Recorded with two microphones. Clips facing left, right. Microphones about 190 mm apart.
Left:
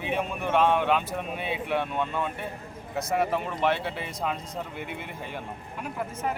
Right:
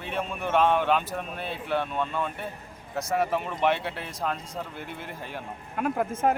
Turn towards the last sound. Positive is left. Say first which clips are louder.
# right 6 dB
turn(degrees=-55)  # may be behind; listen again after turning